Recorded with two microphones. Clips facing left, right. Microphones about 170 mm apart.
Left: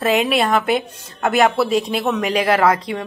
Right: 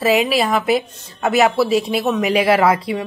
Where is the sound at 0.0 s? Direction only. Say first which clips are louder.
Right 1 dB; 5° right (ahead or behind).